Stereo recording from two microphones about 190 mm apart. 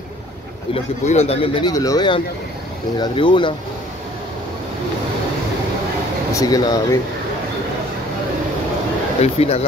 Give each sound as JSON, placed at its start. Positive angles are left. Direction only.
{"t": 1.0, "sound": "speech", "side_deg": 35}
{"t": 6.3, "sound": "speech", "side_deg": 20}
{"t": 9.2, "sound": "speech", "side_deg": 35}